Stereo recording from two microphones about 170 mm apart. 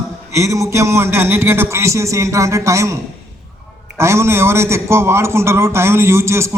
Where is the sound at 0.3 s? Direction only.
15° right (ahead or behind).